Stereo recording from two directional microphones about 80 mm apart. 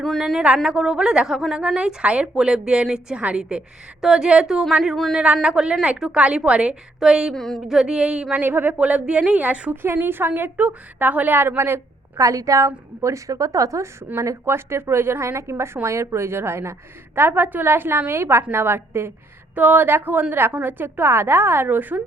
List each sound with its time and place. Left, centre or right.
0.0 s a woman's voice: centre
7.3 s a woman's voice: centre
7.8 s a woman's voice: centre
8.4 s a woman's voice: right
12.2 s a woman's voice: right